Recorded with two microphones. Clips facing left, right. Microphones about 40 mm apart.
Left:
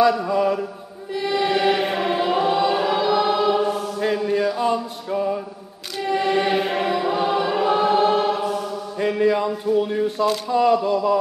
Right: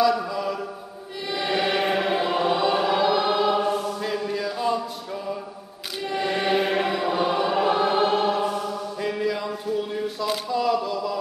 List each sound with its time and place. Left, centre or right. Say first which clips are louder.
0.3 s mantra: left 8 dB; centre
1.3 s choir: left 4 dB; centre
4.0 s music: left 6 dB; centre
6.0 s choir: left 4 dB; centre
8.9 s mantra: left 9 dB; centre
9.8 s a sound: left 7 dB; centre